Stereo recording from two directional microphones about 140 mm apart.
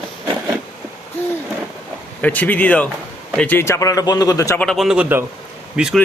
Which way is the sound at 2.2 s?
10° left (ahead or behind).